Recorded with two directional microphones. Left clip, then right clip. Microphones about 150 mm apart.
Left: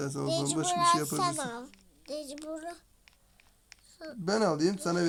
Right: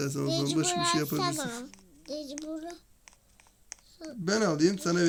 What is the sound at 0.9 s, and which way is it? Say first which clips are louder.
Speech: even; 35° right (ahead or behind).